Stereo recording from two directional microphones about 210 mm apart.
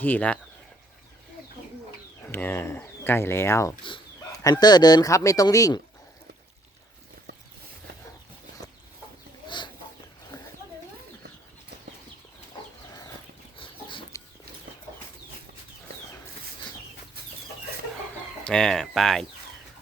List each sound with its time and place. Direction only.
0.0 s speech: 5° left (ahead or behind)
2.2 s speech: 10° left (ahead or behind)
9.5 s chicken: 20° left (ahead or behind)
13.6 s chicken: 25° left (ahead or behind)
18.4 s speech: 5° left (ahead or behind)